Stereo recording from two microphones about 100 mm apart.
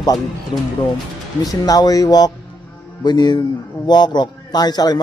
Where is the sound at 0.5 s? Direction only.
60° left (ahead or behind).